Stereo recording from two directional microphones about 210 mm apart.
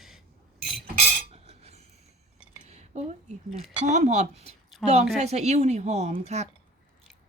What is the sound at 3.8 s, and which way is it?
Speech, 35° right (ahead or behind).